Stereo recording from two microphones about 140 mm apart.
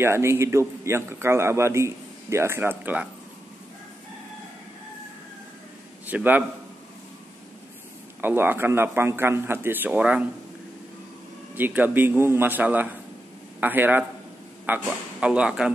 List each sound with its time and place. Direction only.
0.0 s a man's voice: 20° right (ahead or behind)
6.0 s a man's voice: 10° right (ahead or behind)
8.2 s a man's voice: 15° right (ahead or behind)
11.5 s a man's voice: 15° right (ahead or behind)